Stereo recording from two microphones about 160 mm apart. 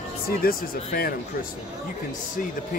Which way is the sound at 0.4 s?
65° left (ahead or behind).